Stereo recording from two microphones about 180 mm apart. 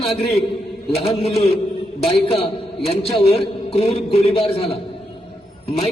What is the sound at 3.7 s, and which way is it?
A man's voice, 35° left (ahead or behind).